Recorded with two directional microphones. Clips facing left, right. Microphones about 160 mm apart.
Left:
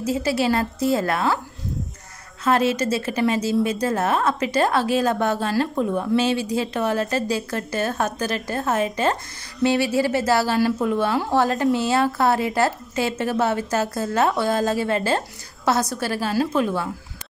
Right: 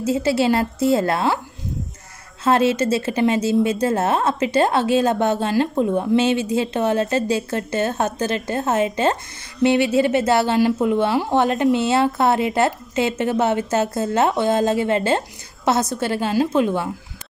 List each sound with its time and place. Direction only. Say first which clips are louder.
0.0 s a woman's voice: right 3 dB; 25° right (ahead or behind)
2.4 s a woman's voice: right 3 dB; 25° right (ahead or behind)